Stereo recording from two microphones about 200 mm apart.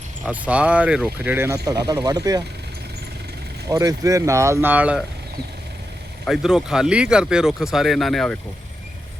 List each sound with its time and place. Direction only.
0.3 s speech: 5° right (ahead or behind)
3.7 s speech: 15° right (ahead or behind)
6.2 s speech: centre (ahead or behind)